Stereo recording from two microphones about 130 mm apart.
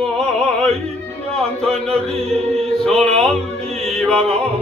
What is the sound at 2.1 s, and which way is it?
Music, 50° right (ahead or behind).